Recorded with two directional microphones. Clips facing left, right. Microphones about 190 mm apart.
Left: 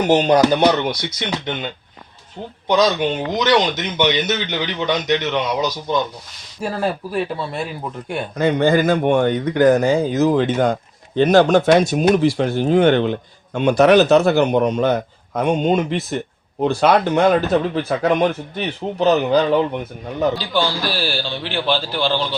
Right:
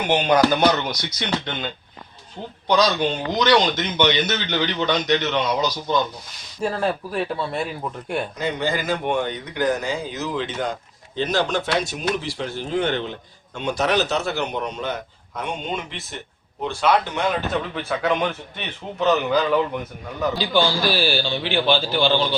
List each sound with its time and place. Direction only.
0.0 s a man's voice: 40° left (ahead or behind)
0.6 s speech: 25° left (ahead or behind)
1.3 s speech: 10° left (ahead or behind)
2.6 s speech: 20° left (ahead or behind)
6.6 s a man's voice: 5° left (ahead or behind)
8.4 s a man's voice: 55° left (ahead or behind); by 20.3 s 25° left (ahead or behind)
20.5 s a man's voice: centre (ahead or behind)